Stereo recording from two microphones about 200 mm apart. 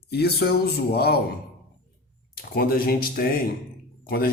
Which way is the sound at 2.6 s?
50° left (ahead or behind).